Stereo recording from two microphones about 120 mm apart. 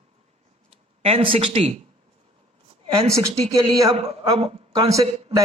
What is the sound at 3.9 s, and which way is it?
Speech, 55° right (ahead or behind).